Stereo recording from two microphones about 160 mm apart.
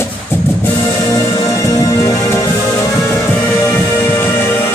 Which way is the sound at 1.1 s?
20° left (ahead or behind).